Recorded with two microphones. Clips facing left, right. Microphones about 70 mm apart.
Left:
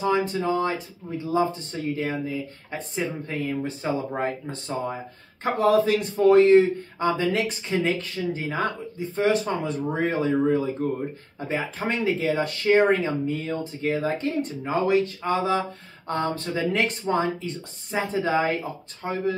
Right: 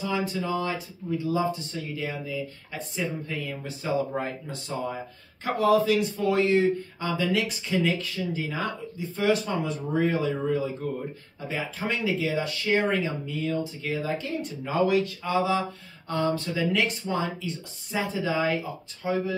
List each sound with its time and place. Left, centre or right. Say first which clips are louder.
0.0 s speech: left 5 dB; left